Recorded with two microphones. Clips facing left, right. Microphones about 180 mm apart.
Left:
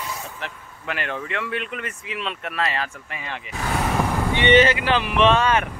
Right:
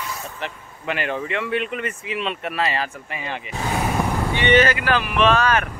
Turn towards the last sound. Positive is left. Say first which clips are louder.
# even
turn(degrees=25)  # may be behind; listen again after turning